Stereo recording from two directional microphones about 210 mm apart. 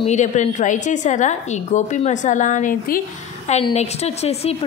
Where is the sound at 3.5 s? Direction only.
30° left (ahead or behind).